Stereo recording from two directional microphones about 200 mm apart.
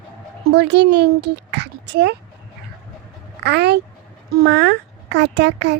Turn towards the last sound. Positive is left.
turn(degrees=-60)  # may be behind; listen again after turning